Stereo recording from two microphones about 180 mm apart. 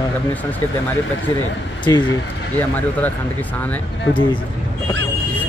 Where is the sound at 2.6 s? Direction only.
10° left (ahead or behind).